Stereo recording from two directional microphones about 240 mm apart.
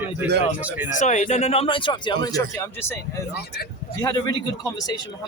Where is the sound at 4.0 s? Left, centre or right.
Centre.